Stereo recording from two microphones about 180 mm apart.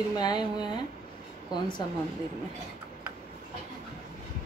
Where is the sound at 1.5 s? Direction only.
25° left (ahead or behind).